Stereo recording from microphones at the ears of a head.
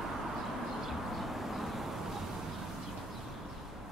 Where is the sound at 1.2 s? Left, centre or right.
Centre.